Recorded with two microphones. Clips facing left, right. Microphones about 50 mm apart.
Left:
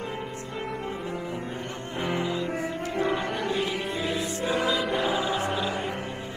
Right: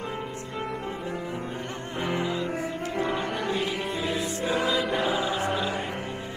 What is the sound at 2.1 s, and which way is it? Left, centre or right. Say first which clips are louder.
Music: even; right.